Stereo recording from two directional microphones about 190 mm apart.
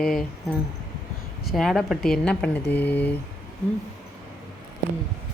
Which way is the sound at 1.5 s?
Centre (ahead or behind).